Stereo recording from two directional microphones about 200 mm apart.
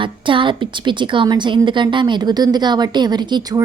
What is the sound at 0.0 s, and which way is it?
A woman's voice, 25° right (ahead or behind).